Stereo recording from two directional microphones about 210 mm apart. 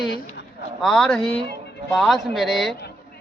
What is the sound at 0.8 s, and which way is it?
A man's voice, centre (ahead or behind).